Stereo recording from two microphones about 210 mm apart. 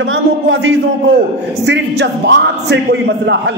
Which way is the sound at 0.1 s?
65° right (ahead or behind).